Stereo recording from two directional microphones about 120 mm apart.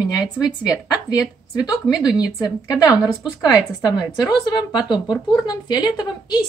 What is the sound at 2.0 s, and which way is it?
A woman's voice, 30° left (ahead or behind).